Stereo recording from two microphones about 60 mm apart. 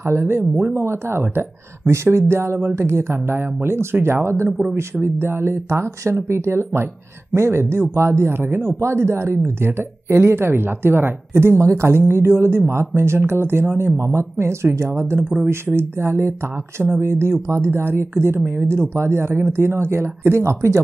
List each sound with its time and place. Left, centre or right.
0.0 s a woman's voice: right